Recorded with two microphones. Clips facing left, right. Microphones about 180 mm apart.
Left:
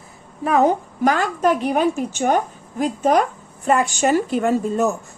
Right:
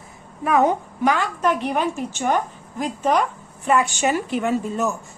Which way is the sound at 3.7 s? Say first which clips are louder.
Left 2 dB; 40° left (ahead or behind).